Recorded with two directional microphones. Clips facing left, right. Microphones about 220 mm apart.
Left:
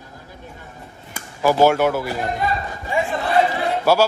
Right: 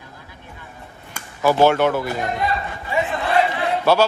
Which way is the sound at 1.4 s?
10° left (ahead or behind).